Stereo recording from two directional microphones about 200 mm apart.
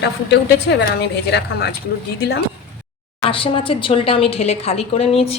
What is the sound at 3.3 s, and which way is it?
A woman's voice, 25° left (ahead or behind).